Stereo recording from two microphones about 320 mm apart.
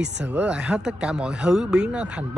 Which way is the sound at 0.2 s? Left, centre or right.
Centre.